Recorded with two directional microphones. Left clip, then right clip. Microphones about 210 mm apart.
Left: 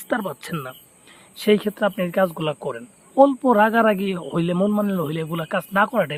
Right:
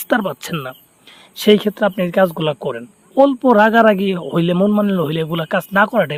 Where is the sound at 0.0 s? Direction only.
35° right (ahead or behind).